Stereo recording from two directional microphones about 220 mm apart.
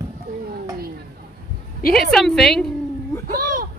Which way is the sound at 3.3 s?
40° right (ahead or behind).